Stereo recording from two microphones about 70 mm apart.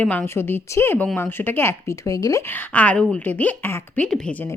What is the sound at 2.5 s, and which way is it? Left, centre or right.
Speech, left.